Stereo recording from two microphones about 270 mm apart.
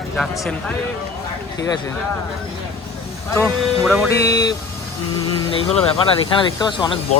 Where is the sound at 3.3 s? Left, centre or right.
Centre.